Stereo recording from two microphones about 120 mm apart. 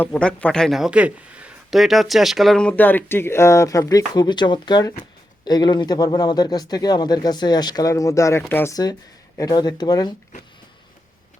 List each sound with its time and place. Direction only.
0.0 s speech: 10° left (ahead or behind)
8.7 s speech: 35° left (ahead or behind)